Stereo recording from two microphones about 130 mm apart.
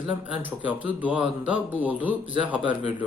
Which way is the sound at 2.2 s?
40° right (ahead or behind).